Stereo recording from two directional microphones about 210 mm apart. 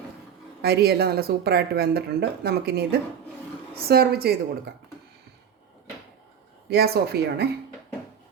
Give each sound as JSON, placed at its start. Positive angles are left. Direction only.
{"t": 0.6, "sound": "speech", "side_deg": -50}
{"t": 6.7, "sound": "speech", "side_deg": -50}